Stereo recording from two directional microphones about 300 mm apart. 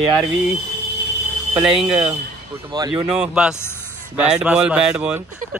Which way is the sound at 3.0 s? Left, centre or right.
Centre.